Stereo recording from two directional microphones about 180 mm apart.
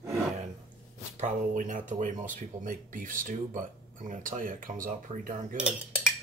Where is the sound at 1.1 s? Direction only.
40° right (ahead or behind).